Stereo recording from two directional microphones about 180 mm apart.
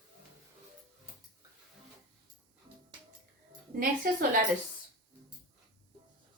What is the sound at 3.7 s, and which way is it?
Speech, 50° right (ahead or behind).